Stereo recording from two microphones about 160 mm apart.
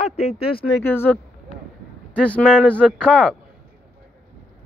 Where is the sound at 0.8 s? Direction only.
15° left (ahead or behind).